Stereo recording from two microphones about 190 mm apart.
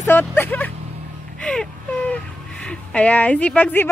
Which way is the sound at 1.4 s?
5° left (ahead or behind).